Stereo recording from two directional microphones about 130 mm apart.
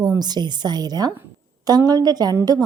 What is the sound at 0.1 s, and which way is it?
A woman's voice, 30° right (ahead or behind).